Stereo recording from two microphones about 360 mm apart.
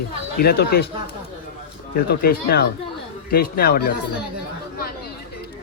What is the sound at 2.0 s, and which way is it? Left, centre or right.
Speech, left.